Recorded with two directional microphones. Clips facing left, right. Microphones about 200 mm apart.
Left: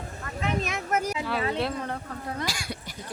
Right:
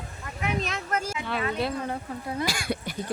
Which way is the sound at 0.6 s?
15° left (ahead or behind).